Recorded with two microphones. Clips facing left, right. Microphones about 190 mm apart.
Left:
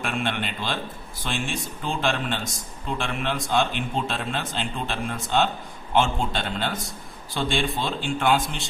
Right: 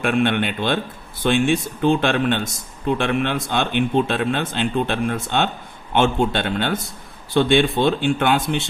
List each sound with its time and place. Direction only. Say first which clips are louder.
0.0 s a man's voice: right 9 dB; 60° right (ahead or behind)